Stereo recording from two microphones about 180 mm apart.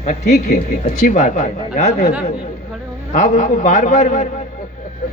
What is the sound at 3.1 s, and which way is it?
Speech, 45° left (ahead or behind).